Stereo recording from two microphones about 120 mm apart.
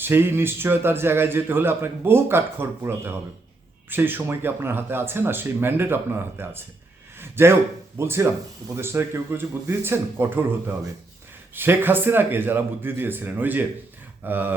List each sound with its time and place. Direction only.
0.0 s a man's voice: 20° right (ahead or behind)
11.5 s speech: 20° right (ahead or behind)